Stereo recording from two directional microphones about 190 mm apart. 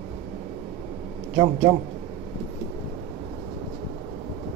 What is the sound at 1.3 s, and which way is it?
Speech, 15° right (ahead or behind).